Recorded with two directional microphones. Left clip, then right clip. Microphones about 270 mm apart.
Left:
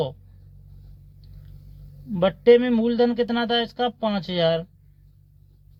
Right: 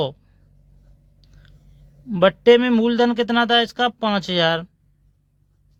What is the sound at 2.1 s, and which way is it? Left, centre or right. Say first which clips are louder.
Speech: right 3 dB; right.